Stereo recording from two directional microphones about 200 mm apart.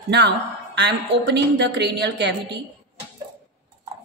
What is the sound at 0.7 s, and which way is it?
A woman's voice, 60° right (ahead or behind).